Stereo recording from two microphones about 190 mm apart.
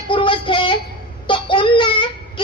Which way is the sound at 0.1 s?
25° left (ahead or behind).